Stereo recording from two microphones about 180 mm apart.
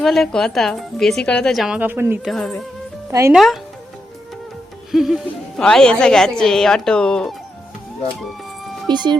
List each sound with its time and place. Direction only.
0.0 s a woman's voice: centre (ahead or behind)
2.3 s a woman's voice: 5° left (ahead or behind)
3.1 s speech: 15° right (ahead or behind)
3.3 s a woman's voice: centre (ahead or behind)
4.9 s a woman's voice: centre (ahead or behind)
8.9 s speech: 25° right (ahead or behind)